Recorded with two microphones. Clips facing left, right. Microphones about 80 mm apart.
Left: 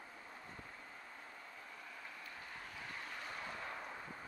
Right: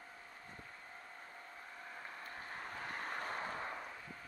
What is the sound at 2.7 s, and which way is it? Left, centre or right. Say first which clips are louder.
Vehicle: right 6 dB; right.